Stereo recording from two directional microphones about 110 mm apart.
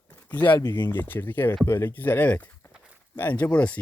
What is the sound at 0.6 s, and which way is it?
Speech, 40° left (ahead or behind).